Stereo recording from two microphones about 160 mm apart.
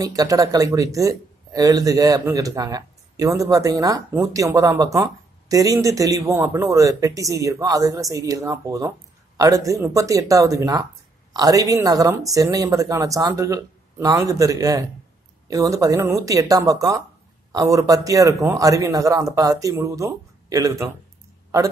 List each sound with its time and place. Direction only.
0.0 s speech: 20° right (ahead or behind)